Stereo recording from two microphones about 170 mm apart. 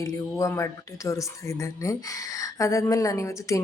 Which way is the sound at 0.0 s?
20° left (ahead or behind).